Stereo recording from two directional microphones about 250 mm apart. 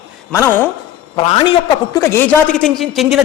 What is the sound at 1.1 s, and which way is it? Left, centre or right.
A man's voice, left.